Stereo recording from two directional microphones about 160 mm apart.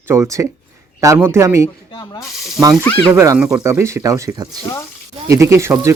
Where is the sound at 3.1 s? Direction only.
20° right (ahead or behind).